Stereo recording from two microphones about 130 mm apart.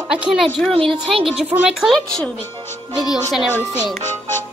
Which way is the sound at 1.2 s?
Centre (ahead or behind).